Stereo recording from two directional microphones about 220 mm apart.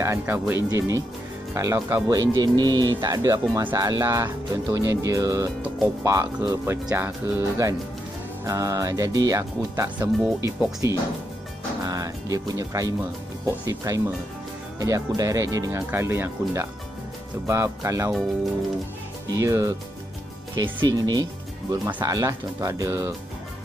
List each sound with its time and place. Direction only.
0.0 s speech: 10° right (ahead or behind)
19.2 s speech: 15° right (ahead or behind)